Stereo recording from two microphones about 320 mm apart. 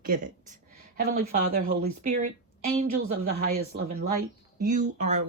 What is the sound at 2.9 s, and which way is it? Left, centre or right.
Speech, right.